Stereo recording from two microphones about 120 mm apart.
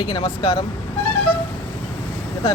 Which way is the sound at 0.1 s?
40° left (ahead or behind).